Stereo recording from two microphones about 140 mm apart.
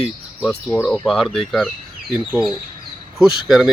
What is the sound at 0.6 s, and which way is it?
Speech, 20° left (ahead or behind).